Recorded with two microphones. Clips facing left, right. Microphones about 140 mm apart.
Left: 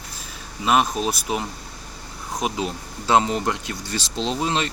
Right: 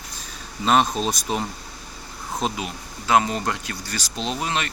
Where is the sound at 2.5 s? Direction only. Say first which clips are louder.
Left 4 dB; 25° left (ahead or behind).